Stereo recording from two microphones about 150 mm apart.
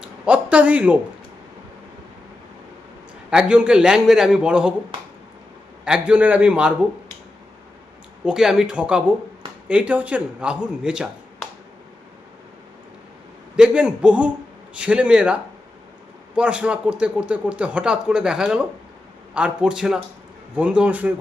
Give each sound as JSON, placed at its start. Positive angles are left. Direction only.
{"t": 0.0, "sound": "a sound", "side_deg": -10}
{"t": 3.2, "sound": "a man's voice", "side_deg": -5}
{"t": 5.8, "sound": "a man's voice", "side_deg": -5}
{"t": 8.2, "sound": "a man's voice", "side_deg": -5}
{"t": 13.6, "sound": "a man's voice", "side_deg": -5}